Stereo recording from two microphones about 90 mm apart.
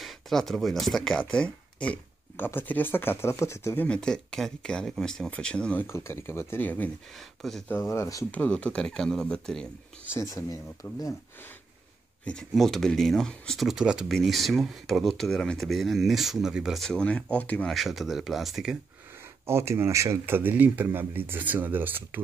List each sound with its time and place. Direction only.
0.0 s speech: centre (ahead or behind)
2.3 s speech: 25° left (ahead or behind)
3.8 s speech: 10° left (ahead or behind)
5.9 s speech: 30° left (ahead or behind)
7.2 s speech: centre (ahead or behind)
7.6 s speech: 20° left (ahead or behind)
8.3 s speech: 15° left (ahead or behind)
10.3 s speech: 40° left (ahead or behind)
12.5 s speech: centre (ahead or behind)
13.7 s speech: 5° right (ahead or behind)
16.8 s speech: 10° left (ahead or behind)
17.6 s speech: centre (ahead or behind)
19.4 s speech: 30° right (ahead or behind)